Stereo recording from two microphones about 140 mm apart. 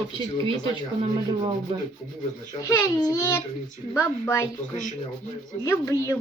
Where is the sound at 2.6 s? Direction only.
20° left (ahead or behind).